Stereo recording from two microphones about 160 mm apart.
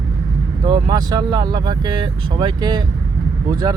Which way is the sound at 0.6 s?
30° right (ahead or behind).